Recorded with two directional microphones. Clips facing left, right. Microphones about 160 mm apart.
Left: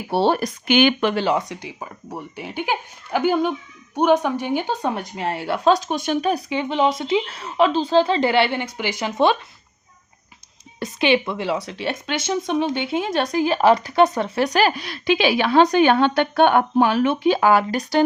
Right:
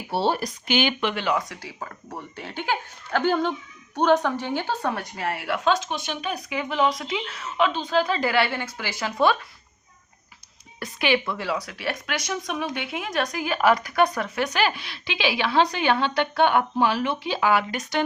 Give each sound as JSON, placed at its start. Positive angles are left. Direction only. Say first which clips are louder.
{"t": 0.1, "sound": "speech", "louder": "left 5 dB", "side_deg": 60}
{"t": 1.1, "sound": "a woman's voice", "louder": "left 5 dB", "side_deg": 30}
{"t": 10.8, "sound": "a woman's voice", "louder": "left 5 dB", "side_deg": 20}